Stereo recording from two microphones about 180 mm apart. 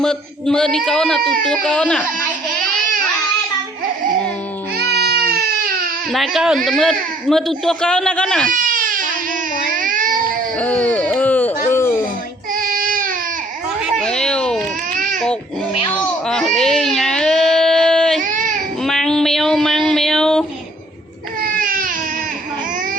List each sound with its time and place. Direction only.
0.0 s speech: 5° left (ahead or behind)
4.8 s baby cry: 60° right (ahead or behind)
6.1 s speech: centre (ahead or behind)
8.4 s baby cry: 45° right (ahead or behind)
10.6 s a sound: 10° left (ahead or behind)
11.7 s music: 15° left (ahead or behind)
12.5 s child singing: 50° right (ahead or behind)
14.0 s a sound: 5° left (ahead or behind)
14.9 s crying: 45° right (ahead or behind)
15.9 s baby cry: 5° left (ahead or behind)
18.2 s baby cry: 45° right (ahead or behind)
18.8 s a sound: 5° left (ahead or behind)
21.4 s baby cry: 50° right (ahead or behind)